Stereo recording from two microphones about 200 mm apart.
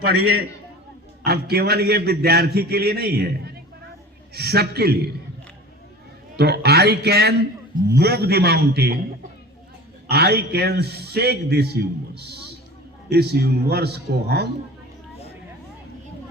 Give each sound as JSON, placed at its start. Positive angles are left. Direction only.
{"t": 0.0, "sound": "a man's voice", "side_deg": -50}
{"t": 6.3, "sound": "a man's voice", "side_deg": -55}
{"t": 10.1, "sound": "a man's voice", "side_deg": -55}